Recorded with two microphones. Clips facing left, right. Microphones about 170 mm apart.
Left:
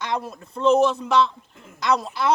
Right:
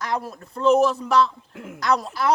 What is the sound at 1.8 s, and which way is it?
Speech, centre (ahead or behind).